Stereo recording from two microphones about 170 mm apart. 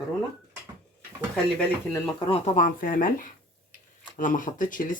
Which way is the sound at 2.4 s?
50° left (ahead or behind).